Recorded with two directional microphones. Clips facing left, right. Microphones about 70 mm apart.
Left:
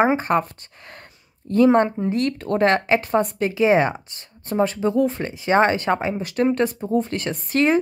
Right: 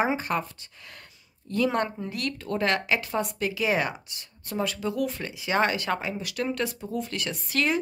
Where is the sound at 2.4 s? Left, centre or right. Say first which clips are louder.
Left 6 dB; left.